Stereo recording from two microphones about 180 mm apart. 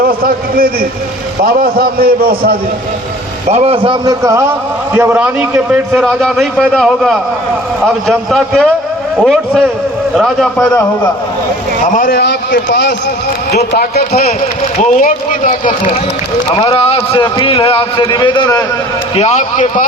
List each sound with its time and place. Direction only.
0.0 s a man's voice: 55° right (ahead or behind)
3.5 s a man's voice: 35° right (ahead or behind); by 10.7 s centre (ahead or behind)
11.8 s a man's voice: 50° left (ahead or behind)
14.8 s a man's voice: 45° left (ahead or behind); by 18.6 s 25° left (ahead or behind)
19.1 s a man's voice: 35° left (ahead or behind)